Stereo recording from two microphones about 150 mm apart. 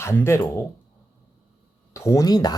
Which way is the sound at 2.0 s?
20° left (ahead or behind).